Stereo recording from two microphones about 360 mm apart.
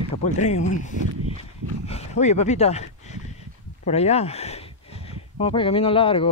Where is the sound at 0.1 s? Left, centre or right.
Centre.